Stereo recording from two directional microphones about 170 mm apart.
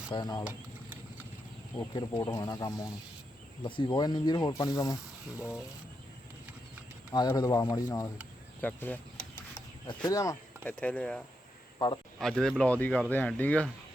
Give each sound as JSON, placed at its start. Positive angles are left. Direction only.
{"t": 0.1, "sound": "speech", "side_deg": 25}
{"t": 1.9, "sound": "speech", "side_deg": 25}
{"t": 5.4, "sound": "speech", "side_deg": -5}
{"t": 7.1, "sound": "speech", "side_deg": 25}
{"t": 9.6, "sound": "speech", "side_deg": 25}
{"t": 12.2, "sound": "speech", "side_deg": 5}